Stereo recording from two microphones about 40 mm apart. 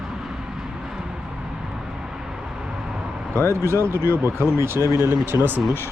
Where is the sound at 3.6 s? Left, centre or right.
Right.